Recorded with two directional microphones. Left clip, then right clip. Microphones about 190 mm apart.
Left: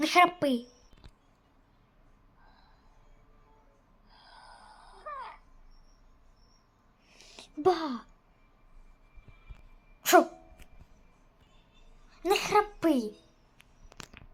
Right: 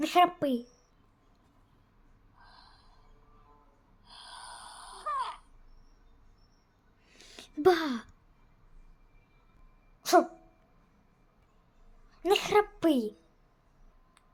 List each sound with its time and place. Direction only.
0.0 s a woman's voice: 5° right (ahead or behind)
2.4 s a sound: 35° right (ahead or behind)
4.0 s snoring: 35° right (ahead or behind)
7.1 s a sound: 10° right (ahead or behind)
10.0 s dog: 10° left (ahead or behind)
12.1 s a child's voice: 10° right (ahead or behind)